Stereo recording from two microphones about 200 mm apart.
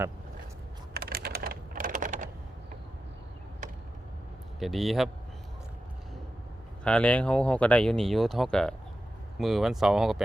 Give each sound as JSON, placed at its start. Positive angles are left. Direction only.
{"t": 0.9, "sound": "typing", "side_deg": -50}
{"t": 4.6, "sound": "speech", "side_deg": 0}
{"t": 6.8, "sound": "speech", "side_deg": 5}